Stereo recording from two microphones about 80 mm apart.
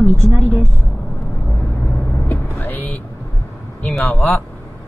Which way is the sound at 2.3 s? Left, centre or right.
Left.